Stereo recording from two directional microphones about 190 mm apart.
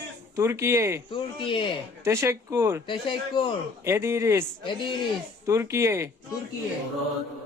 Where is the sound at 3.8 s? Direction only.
15° right (ahead or behind).